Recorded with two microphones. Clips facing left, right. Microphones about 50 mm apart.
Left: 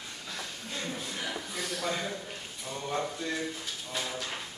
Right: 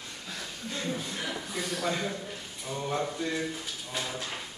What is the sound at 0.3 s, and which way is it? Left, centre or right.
Speech, centre.